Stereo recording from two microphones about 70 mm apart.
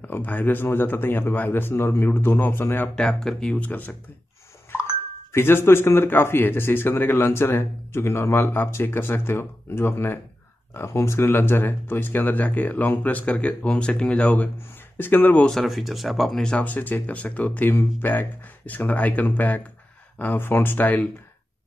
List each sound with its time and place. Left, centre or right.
0.0 s speech: left
3.0 s speech: centre
3.5 s speech: left
5.3 s speech: left
15.4 s speech: centre
16.4 s speech: centre